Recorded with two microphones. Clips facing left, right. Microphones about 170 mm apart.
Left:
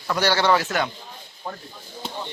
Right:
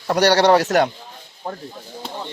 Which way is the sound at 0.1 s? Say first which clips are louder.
Right 6 dB; 70° right (ahead or behind).